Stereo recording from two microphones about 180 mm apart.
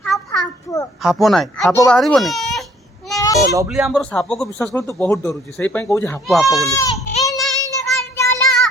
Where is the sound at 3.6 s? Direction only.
5° right (ahead or behind); by 6.2 s 15° left (ahead or behind).